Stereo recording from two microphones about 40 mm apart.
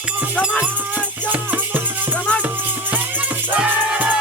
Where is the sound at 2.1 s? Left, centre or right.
Left.